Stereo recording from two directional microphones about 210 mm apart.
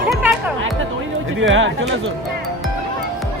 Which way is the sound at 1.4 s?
65° right (ahead or behind).